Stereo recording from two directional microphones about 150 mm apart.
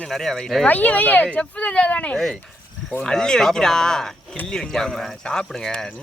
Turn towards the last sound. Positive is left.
turn(degrees=5)  # may be behind; listen again after turning